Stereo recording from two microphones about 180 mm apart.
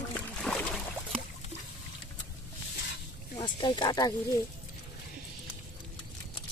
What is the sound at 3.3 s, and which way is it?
Speech, 25° left (ahead or behind).